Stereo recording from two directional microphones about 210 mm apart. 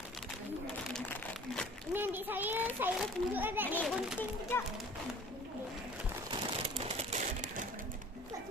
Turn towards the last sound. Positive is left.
turn(degrees=-35)  # may be behind; listen again after turning